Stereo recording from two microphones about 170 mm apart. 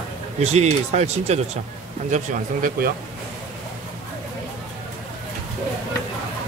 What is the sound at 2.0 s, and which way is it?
Speech, 50° right (ahead or behind).